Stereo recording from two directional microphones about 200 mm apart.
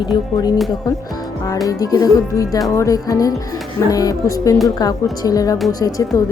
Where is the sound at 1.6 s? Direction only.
20° left (ahead or behind).